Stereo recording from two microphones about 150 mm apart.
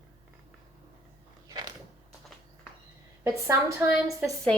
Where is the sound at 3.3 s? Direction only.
20° right (ahead or behind).